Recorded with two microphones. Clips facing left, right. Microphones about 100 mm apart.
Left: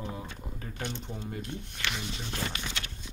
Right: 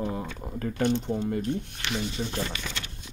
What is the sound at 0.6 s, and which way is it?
Speech, 65° right (ahead or behind).